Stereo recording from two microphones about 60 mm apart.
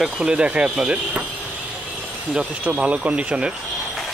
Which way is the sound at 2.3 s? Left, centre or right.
Right.